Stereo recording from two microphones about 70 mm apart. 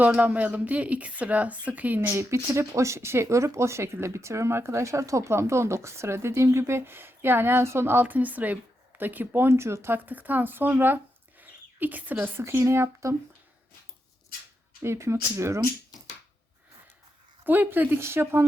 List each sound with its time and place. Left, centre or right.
0.0 s speech: right
2.1 s speech: right
12.4 s speech: right
14.8 s speech: right
17.4 s speech: right